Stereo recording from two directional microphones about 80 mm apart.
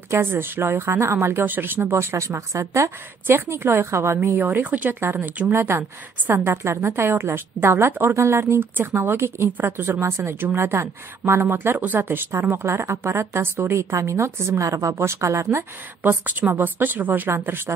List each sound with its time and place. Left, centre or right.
0.1 s a woman's voice: right
16.0 s speech: right